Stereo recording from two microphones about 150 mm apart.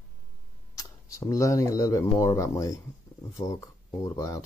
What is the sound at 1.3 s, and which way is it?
Speech, 20° left (ahead or behind).